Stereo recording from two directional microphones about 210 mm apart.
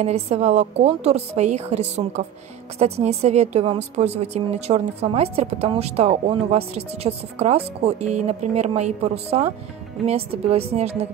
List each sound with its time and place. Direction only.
0.0 s a woman's voice: 30° right (ahead or behind)